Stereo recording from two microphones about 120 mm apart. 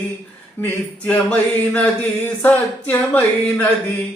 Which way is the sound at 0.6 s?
15° left (ahead or behind).